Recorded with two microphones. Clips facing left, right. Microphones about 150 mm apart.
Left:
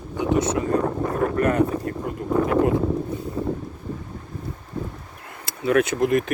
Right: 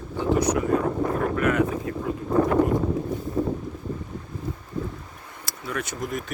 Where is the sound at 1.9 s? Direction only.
55° left (ahead or behind).